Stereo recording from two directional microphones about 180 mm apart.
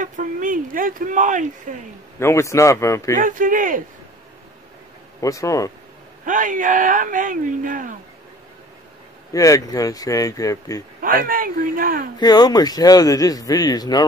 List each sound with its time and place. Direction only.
0.0 s speech: 45° right (ahead or behind)
2.1 s a man's voice: 15° left (ahead or behind)
3.2 s speech: 50° right (ahead or behind)
5.2 s a man's voice: 20° left (ahead or behind)
6.2 s speech: 45° right (ahead or behind)
9.3 s speech: 20° left (ahead or behind)
11.0 s speech: 50° right (ahead or behind)
12.2 s speech: 20° left (ahead or behind)